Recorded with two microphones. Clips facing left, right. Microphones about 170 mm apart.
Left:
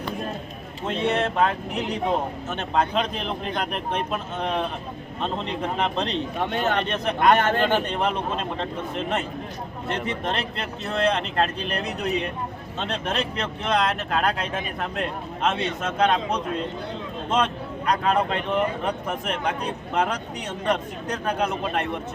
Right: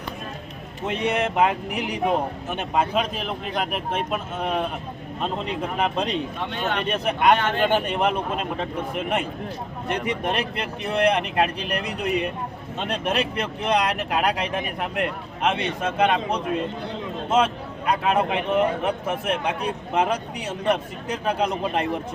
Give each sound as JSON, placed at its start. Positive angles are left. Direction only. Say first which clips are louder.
{"t": 0.9, "sound": "speech", "louder": "even", "side_deg": -15}
{"t": 6.5, "sound": "speech", "louder": "left 3 dB", "side_deg": 40}
{"t": 6.8, "sound": "a man's voice", "louder": "right 3 dB", "side_deg": -10}